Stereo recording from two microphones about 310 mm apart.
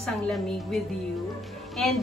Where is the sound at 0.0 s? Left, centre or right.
Centre.